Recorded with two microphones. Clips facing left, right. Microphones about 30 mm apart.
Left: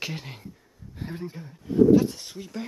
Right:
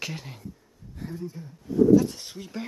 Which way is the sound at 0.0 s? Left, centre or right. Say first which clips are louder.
Left 1 dB; centre.